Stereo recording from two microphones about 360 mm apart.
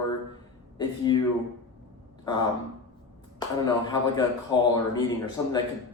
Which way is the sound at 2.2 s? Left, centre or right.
Centre.